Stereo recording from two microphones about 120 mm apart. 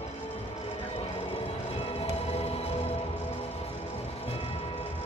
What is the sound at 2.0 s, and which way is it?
Music, 55° left (ahead or behind).